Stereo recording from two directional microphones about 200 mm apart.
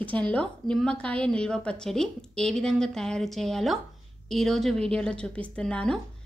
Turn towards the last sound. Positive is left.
turn(degrees=5)  # may be behind; listen again after turning